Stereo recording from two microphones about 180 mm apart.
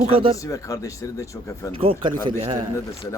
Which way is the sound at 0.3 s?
20° left (ahead or behind).